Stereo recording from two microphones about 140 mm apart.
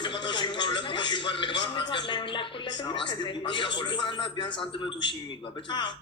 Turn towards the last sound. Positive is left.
turn(degrees=35)  # may be behind; listen again after turning